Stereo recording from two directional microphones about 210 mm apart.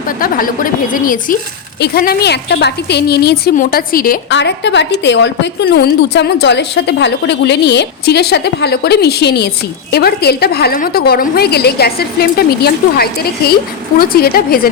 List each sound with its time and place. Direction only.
0.2 s a woman's voice: 40° left (ahead or behind)
4.4 s a woman's voice: 55° left (ahead or behind)